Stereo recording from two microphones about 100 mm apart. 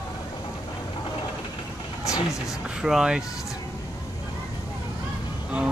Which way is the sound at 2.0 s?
30° left (ahead or behind).